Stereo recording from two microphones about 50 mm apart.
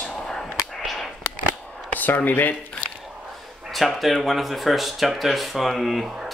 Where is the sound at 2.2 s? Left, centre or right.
Left.